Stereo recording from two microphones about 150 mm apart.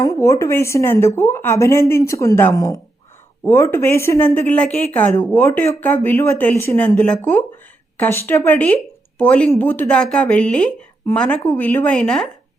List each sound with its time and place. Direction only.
0.0 s a woman's voice: 20° left (ahead or behind); by 12.3 s 5° left (ahead or behind)